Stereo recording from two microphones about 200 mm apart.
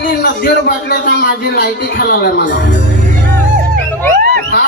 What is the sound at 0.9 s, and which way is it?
Speech, 50° left (ahead or behind).